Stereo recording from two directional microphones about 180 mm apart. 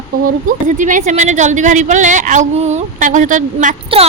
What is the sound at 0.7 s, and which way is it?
A woman's voice, 45° right (ahead or behind).